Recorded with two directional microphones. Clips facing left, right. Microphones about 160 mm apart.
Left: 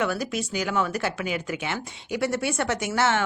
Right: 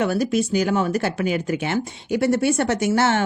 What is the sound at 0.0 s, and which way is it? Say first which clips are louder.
Speech: right 6 dB; 35° right (ahead or behind).